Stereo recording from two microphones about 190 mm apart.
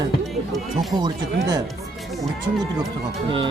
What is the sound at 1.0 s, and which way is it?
Speech, 20° right (ahead or behind).